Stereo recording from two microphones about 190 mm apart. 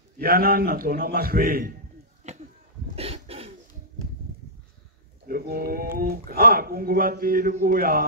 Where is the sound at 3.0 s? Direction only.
30° right (ahead or behind).